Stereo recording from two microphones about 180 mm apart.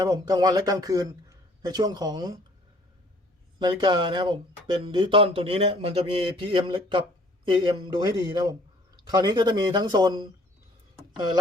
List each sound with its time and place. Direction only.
0.0 s speech: 20° right (ahead or behind)
3.6 s speech: 25° right (ahead or behind)